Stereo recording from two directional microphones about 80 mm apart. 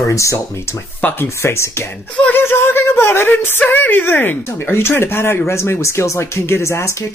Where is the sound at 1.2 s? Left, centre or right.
Left.